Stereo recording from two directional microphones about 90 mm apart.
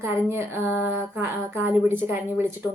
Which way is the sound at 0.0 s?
30° right (ahead or behind).